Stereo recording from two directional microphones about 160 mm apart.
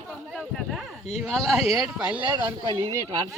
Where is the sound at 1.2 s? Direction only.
Centre (ahead or behind).